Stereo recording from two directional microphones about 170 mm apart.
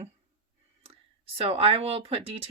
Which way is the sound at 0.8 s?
35° right (ahead or behind).